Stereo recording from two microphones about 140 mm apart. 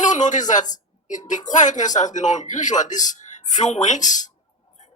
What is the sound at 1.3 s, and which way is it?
Speech, 60° left (ahead or behind).